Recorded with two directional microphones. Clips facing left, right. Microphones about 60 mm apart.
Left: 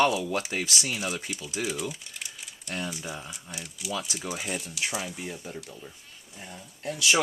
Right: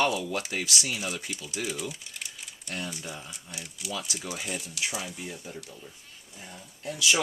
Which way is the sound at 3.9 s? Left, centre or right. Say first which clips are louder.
Left 2 dB; left.